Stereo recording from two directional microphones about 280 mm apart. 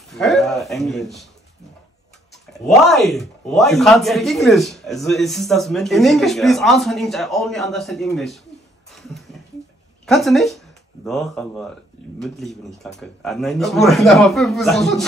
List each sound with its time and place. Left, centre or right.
0.1 s speech: centre
2.3 s speech: centre
8.9 s a sound: centre
10.0 s speech: centre